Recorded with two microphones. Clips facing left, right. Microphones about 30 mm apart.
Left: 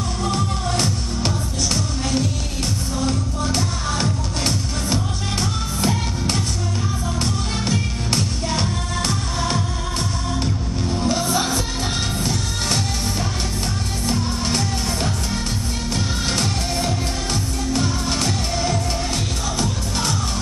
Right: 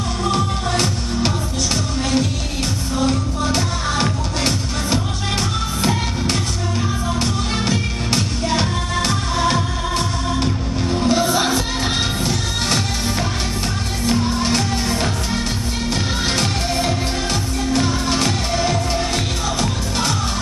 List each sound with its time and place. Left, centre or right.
0.2 s music: right
14.0 s music: right